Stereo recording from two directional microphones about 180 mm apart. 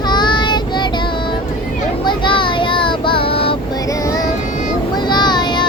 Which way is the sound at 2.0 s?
25° left (ahead or behind).